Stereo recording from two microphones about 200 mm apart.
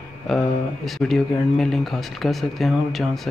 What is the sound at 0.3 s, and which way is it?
Speech, centre (ahead or behind).